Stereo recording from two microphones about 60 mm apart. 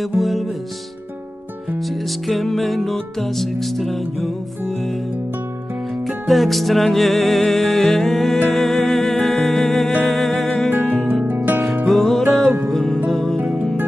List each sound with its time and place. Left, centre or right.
0.2 s music: centre
1.8 s music: centre
6.0 s music: centre
10.7 s music: right
11.9 s music: centre
12.4 s music: right
12.7 s music: centre